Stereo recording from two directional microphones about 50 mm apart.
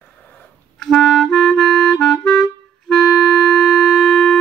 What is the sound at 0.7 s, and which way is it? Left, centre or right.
Clarinet, centre.